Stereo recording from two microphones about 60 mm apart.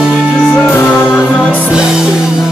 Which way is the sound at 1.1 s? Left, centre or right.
Centre.